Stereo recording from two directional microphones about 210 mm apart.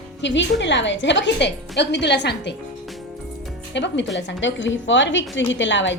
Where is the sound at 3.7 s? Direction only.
55° left (ahead or behind).